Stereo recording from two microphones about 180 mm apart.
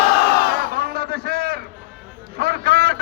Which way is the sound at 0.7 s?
55° right (ahead or behind).